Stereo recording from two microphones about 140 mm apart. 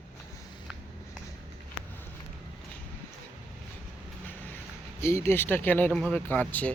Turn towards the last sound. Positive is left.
turn(degrees=10)  # may be behind; listen again after turning